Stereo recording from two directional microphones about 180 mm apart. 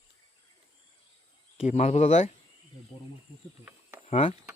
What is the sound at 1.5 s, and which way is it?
Speech, 35° left (ahead or behind).